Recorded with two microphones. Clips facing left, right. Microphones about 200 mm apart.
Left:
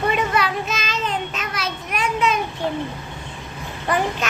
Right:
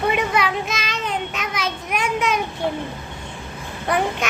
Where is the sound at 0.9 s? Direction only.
65° right (ahead or behind).